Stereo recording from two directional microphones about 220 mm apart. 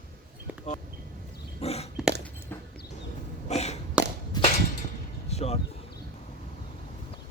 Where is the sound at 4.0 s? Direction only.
5° right (ahead or behind).